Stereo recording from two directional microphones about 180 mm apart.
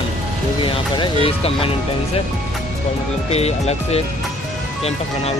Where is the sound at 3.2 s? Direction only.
35° left (ahead or behind).